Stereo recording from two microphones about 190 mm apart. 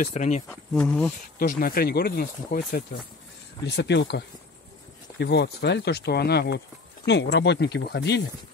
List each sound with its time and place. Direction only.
0.0 s speech: 40° left (ahead or behind)
0.5 s speech: 5° left (ahead or behind)
1.4 s speech: 50° left (ahead or behind)
3.6 s speech: 65° left (ahead or behind)
5.2 s speech: 60° left (ahead or behind)